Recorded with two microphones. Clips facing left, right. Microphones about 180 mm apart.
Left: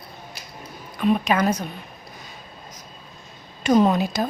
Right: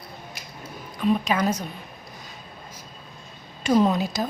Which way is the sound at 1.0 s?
65° left (ahead or behind).